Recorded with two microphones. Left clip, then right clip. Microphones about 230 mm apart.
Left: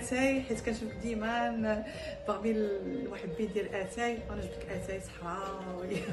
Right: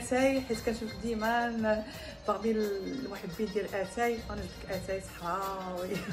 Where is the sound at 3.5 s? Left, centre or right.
Centre.